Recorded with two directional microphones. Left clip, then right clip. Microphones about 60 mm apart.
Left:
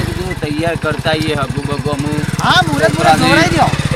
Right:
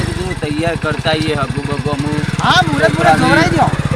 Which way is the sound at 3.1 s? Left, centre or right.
Centre.